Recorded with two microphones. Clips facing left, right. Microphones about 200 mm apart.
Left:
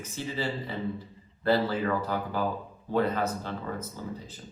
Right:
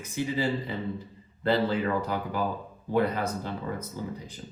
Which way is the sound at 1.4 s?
20° right (ahead or behind).